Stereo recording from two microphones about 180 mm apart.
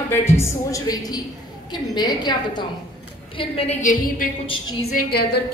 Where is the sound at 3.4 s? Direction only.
35° left (ahead or behind).